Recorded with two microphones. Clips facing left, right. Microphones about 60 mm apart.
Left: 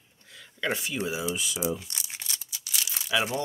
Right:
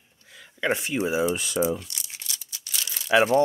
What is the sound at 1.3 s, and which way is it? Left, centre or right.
Speech, right.